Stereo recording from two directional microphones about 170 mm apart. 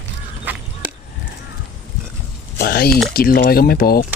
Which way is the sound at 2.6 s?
65° left (ahead or behind).